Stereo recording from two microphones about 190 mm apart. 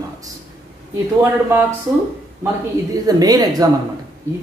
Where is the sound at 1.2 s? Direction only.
15° right (ahead or behind).